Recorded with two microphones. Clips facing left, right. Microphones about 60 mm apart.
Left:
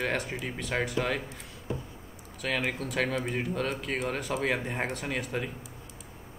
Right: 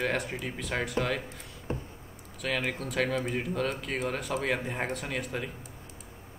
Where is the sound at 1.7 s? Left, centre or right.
Right.